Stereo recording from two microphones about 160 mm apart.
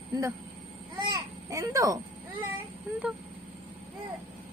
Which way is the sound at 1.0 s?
25° right (ahead or behind).